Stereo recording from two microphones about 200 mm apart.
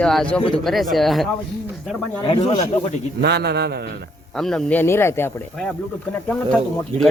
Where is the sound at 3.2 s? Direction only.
55° right (ahead or behind).